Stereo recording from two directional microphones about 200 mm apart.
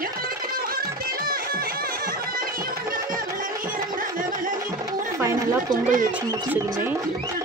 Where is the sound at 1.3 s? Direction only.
45° right (ahead or behind).